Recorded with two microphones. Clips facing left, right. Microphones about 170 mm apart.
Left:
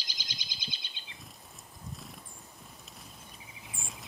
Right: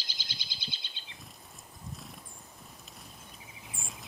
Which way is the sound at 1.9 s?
Centre (ahead or behind).